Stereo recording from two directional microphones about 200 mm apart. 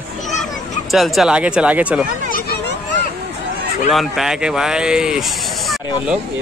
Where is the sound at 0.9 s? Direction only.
Centre (ahead or behind).